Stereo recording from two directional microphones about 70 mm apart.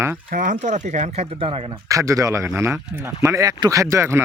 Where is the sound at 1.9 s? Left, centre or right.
Right.